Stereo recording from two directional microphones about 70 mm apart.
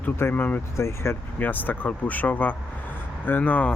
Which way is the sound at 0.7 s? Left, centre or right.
Left.